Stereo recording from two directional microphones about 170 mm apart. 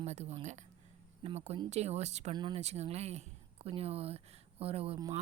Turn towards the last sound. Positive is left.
turn(degrees=-35)  # may be behind; listen again after turning